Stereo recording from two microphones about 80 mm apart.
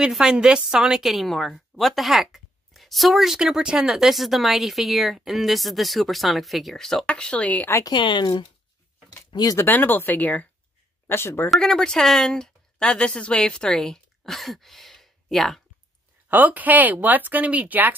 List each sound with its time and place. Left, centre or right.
0.0 s a woman's voice: centre
7.9 s speech: left
9.3 s speech: left
9.6 s speech: left
11.5 s a woman's voice: centre
16.3 s speech: right